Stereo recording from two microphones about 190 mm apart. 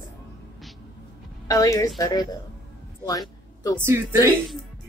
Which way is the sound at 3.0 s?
20° left (ahead or behind).